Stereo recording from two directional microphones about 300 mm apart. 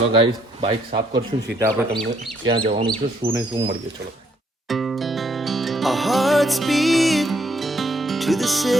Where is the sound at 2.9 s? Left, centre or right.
Centre.